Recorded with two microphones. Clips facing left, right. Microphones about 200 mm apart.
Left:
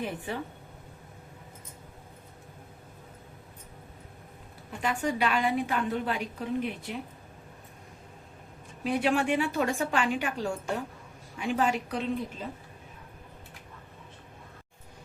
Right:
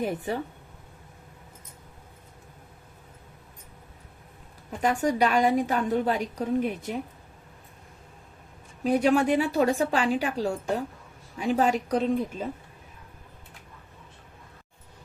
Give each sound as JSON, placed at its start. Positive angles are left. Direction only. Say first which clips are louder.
{"t": 0.0, "sound": "a woman's voice", "louder": "right 5 dB", "side_deg": -40}
{"t": 4.8, "sound": "a woman's voice", "louder": "right 5 dB", "side_deg": -40}
{"t": 8.8, "sound": "a woman's voice", "louder": "right 5 dB", "side_deg": -40}